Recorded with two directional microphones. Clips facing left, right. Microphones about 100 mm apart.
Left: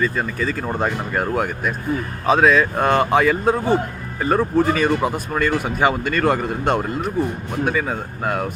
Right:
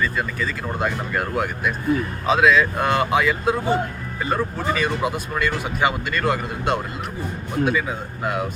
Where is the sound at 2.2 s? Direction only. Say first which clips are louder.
Left 2 dB; 40° left (ahead or behind).